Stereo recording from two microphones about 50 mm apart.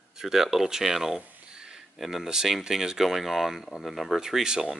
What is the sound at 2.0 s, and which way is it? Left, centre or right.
Speech, centre.